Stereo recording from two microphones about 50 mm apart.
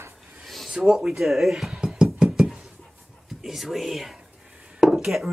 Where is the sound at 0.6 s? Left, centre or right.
Centre.